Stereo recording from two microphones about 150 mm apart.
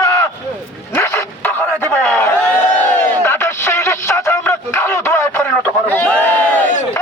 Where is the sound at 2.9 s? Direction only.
10° left (ahead or behind).